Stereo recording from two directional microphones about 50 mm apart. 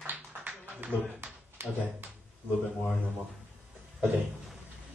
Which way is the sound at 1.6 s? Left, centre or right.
Right.